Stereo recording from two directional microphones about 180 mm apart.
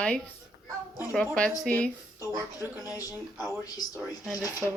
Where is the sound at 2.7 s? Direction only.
20° left (ahead or behind).